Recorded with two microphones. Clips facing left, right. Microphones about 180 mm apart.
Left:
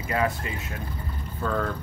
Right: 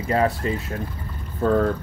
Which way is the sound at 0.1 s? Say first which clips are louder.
Right 6 dB; 35° right (ahead or behind).